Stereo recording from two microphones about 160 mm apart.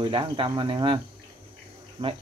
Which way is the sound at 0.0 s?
35° right (ahead or behind).